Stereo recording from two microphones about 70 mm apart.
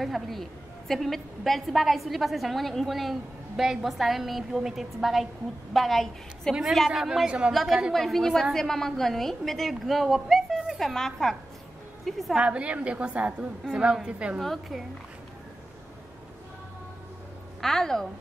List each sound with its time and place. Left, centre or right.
0.0 s a woman's voice: centre
7.5 s a woman's voice: centre
12.4 s a woman's voice: centre
14.4 s a woman's voice: centre
17.6 s a woman's voice: centre